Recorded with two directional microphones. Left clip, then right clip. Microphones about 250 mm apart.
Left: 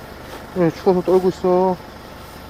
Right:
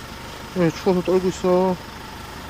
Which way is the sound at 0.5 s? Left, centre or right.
Centre.